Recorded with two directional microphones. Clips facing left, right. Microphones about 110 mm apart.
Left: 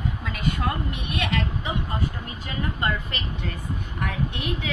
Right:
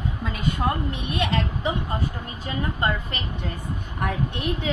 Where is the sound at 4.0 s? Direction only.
40° right (ahead or behind).